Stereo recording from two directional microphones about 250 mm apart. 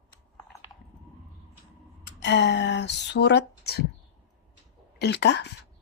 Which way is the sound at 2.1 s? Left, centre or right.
Left.